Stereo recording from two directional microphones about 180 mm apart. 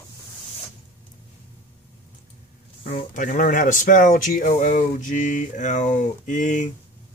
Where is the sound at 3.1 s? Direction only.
45° left (ahead or behind).